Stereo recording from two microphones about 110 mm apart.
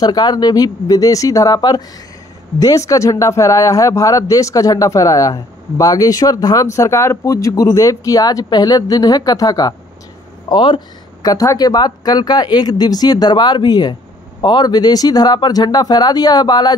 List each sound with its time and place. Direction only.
0.0 s a man's voice: 40° left (ahead or behind)
10.5 s speech: 45° left (ahead or behind)
11.2 s a man's voice: 35° left (ahead or behind)